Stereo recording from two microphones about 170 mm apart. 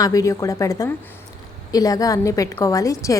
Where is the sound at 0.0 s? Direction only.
20° left (ahead or behind).